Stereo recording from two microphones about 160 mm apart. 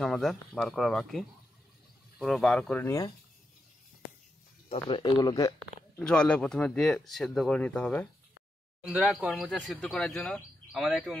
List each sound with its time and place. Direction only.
0.0 s speech: centre (ahead or behind)
4.6 s speech: 30° left (ahead or behind)
5.9 s speech: 5° left (ahead or behind)
8.8 s speech: 5° right (ahead or behind)